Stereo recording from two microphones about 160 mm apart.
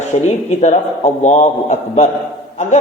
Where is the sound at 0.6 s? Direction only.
50° left (ahead or behind).